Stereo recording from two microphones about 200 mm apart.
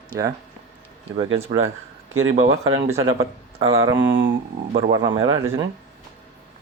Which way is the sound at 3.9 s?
10° right (ahead or behind).